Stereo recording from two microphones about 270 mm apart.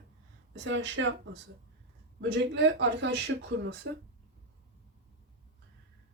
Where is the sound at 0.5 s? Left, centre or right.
Right.